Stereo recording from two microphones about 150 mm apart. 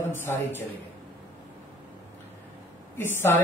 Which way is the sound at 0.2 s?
15° left (ahead or behind).